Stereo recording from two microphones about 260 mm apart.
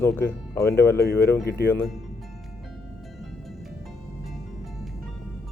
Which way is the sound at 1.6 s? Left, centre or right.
Centre.